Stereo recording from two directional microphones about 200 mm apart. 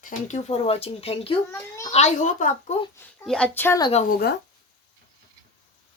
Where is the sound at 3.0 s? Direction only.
5° left (ahead or behind).